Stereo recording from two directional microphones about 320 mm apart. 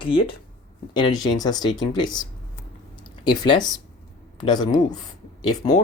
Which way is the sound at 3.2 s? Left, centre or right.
Centre.